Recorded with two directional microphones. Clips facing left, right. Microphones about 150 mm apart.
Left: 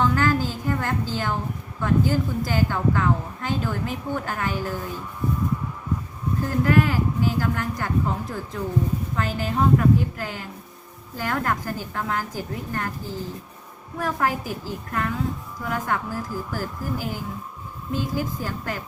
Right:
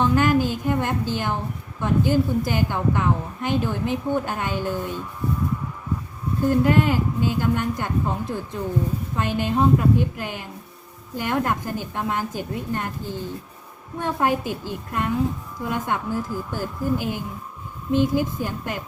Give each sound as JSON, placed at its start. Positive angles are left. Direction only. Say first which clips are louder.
{"t": 0.0, "sound": "a woman's voice", "louder": "right 3 dB", "side_deg": -20}
{"t": 6.5, "sound": "a woman's voice", "louder": "right 2 dB", "side_deg": -20}